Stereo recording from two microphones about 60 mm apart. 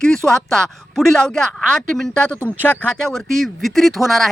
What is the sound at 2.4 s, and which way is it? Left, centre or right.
Speech, left.